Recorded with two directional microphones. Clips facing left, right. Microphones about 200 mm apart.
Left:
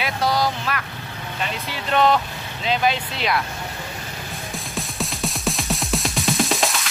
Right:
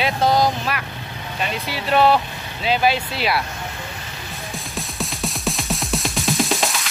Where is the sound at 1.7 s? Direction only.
10° right (ahead or behind).